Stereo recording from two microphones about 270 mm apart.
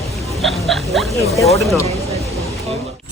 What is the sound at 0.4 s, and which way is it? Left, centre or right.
Speech, centre.